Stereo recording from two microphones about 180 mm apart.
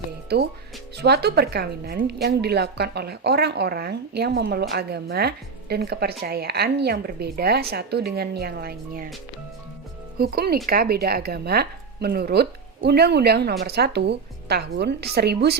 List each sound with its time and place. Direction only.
0.3 s speech: 65° right (ahead or behind)
10.2 s speech: 60° right (ahead or behind)